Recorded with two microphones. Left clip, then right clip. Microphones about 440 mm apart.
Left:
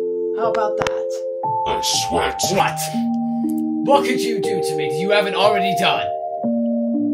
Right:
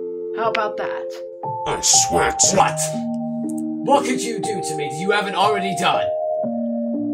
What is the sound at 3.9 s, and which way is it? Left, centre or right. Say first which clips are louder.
A man's voice: left 2 dB; left.